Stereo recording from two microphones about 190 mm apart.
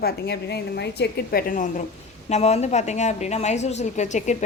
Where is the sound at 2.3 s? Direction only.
35° left (ahead or behind).